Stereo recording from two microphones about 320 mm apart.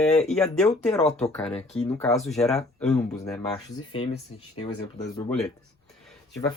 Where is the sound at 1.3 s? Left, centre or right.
Centre.